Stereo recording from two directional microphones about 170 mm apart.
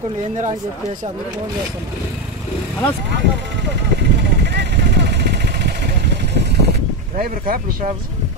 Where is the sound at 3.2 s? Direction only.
90° right.